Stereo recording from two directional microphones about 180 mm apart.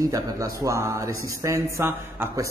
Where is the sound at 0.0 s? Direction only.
20° right (ahead or behind).